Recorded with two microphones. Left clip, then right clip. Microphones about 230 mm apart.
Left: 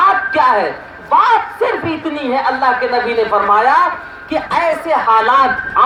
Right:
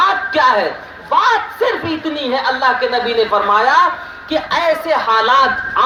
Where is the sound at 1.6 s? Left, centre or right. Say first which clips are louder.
Left 1 dB; right.